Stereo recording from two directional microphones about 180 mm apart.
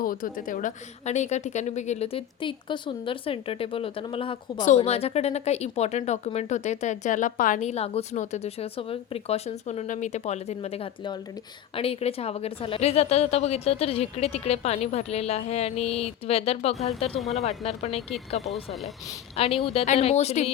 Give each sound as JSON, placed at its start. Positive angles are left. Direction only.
{"t": 0.0, "sound": "a woman's voice", "side_deg": 50}
{"t": 17.2, "sound": "speech", "side_deg": 0}
{"t": 17.4, "sound": "a woman's voice", "side_deg": 40}
{"t": 18.5, "sound": "speech", "side_deg": 0}
{"t": 19.4, "sound": "a woman's voice", "side_deg": 30}